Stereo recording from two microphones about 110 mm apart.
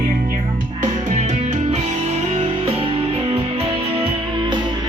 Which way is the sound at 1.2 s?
90° right.